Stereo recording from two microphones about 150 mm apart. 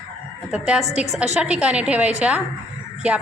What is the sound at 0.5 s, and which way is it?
A woman's voice, 5° right (ahead or behind).